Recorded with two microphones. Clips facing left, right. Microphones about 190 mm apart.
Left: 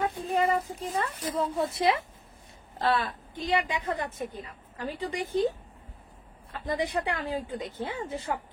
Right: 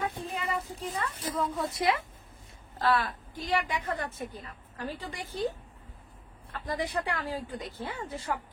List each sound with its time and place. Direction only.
0.3 s child singing: 35° left (ahead or behind)
1.2 s a woman's voice: 25° left (ahead or behind)
6.6 s a woman's voice: 20° left (ahead or behind)